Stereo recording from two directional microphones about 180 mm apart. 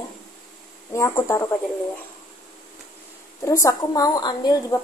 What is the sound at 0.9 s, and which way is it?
Speech, 15° left (ahead or behind).